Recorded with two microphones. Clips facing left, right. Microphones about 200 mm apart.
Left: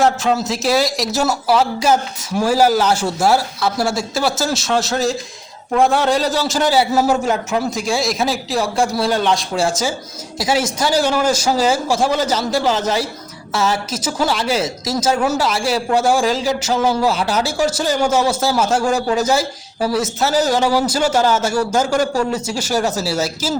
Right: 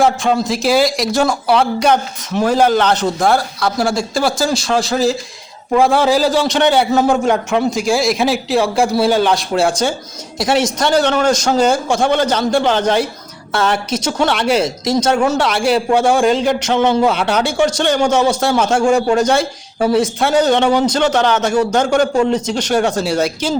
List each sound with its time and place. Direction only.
0.0 s a woman's voice: centre (ahead or behind)
19.8 s speech: 25° right (ahead or behind)
20.1 s speech: 5° left (ahead or behind)